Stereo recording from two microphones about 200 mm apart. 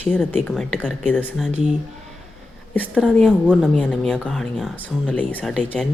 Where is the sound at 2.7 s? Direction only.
10° left (ahead or behind).